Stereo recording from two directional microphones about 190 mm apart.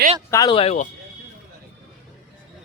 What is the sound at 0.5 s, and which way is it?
Speech, 35° left (ahead or behind).